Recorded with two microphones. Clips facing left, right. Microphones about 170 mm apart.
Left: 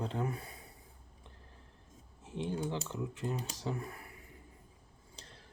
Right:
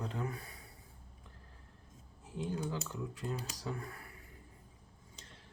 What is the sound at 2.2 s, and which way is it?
Speech, 25° left (ahead or behind).